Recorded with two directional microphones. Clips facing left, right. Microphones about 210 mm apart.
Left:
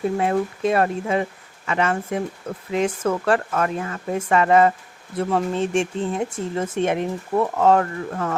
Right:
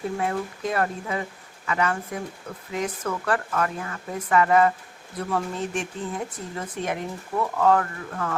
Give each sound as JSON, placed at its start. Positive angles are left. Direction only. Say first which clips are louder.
{"t": 0.2, "sound": "speech", "louder": "left 6 dB", "side_deg": 25}